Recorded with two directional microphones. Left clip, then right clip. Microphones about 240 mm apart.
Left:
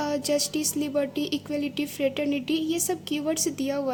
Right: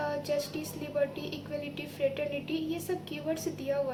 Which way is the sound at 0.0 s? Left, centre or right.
Left.